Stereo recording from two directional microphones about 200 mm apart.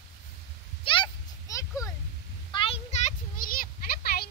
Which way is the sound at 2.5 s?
30° left (ahead or behind).